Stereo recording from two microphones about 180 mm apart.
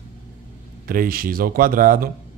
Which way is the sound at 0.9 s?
55° right (ahead or behind).